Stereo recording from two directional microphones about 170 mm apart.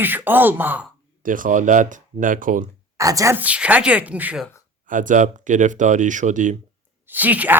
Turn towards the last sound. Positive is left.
turn(degrees=-10)  # may be behind; listen again after turning